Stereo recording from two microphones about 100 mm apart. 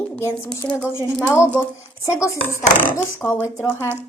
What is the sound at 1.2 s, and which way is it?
Speech, 25° left (ahead or behind).